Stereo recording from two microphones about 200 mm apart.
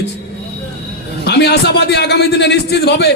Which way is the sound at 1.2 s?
55° left (ahead or behind).